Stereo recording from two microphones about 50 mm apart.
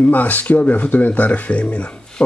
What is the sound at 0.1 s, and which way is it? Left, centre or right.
Speech, left.